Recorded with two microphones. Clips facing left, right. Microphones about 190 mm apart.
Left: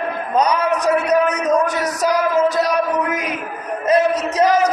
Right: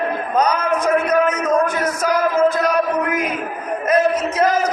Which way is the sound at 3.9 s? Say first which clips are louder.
Left 1 dB; 40° left (ahead or behind).